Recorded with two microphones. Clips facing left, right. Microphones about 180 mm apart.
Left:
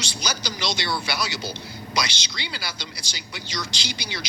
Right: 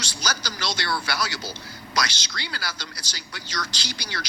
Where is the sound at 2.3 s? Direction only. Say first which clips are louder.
Right 1 dB; 20° left (ahead or behind).